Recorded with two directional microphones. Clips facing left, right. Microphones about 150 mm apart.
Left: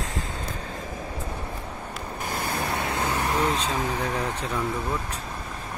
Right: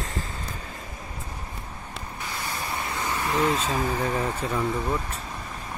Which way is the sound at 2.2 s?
55° left (ahead or behind).